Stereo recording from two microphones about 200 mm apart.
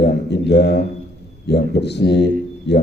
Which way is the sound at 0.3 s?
55° left (ahead or behind).